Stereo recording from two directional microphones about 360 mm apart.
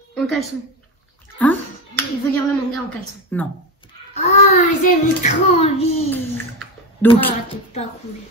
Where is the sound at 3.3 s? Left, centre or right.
Centre.